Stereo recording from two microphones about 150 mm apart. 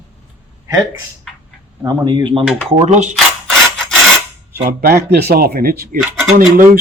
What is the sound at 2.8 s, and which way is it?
Speech, 50° right (ahead or behind).